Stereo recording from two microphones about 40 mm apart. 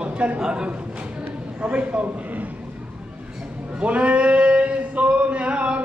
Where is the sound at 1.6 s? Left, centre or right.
Right.